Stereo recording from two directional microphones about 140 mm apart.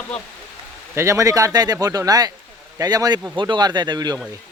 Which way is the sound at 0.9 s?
20° right (ahead or behind).